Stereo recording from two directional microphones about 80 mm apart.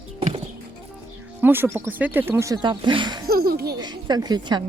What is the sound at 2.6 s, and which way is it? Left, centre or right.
Speech, right.